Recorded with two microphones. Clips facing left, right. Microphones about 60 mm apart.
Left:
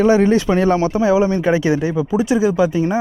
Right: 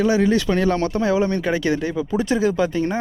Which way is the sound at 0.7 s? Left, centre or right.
Centre.